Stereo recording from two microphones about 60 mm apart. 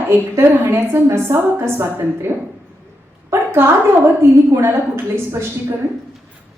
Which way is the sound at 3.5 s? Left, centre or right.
Right.